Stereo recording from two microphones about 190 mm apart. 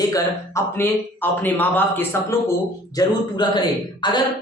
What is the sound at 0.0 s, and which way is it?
A woman's voice, 15° left (ahead or behind).